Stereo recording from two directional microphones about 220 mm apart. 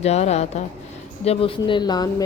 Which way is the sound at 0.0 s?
30° left (ahead or behind).